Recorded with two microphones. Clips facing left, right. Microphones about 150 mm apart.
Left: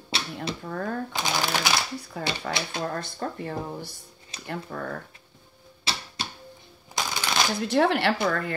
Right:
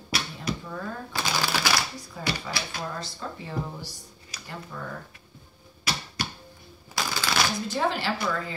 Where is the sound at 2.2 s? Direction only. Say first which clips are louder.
Left 1 dB; 65° left (ahead or behind).